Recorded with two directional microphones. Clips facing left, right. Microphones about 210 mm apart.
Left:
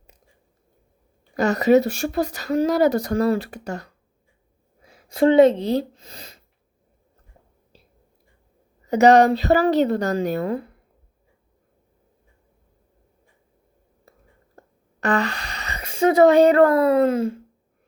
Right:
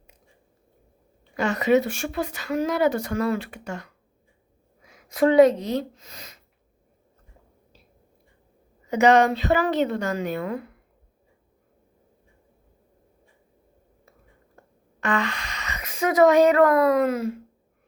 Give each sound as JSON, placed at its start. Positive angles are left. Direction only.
{"t": 1.4, "sound": "speech", "side_deg": 40}
{"t": 8.9, "sound": "speech", "side_deg": 35}
{"t": 14.6, "sound": "a sound", "side_deg": 40}
{"t": 15.0, "sound": "speech", "side_deg": 35}